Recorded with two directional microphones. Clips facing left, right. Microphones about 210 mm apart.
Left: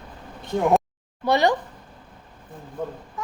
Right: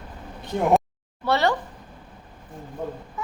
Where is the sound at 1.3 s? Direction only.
15° left (ahead or behind).